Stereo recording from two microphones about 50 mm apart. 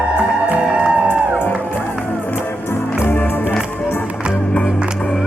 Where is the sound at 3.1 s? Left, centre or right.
Left.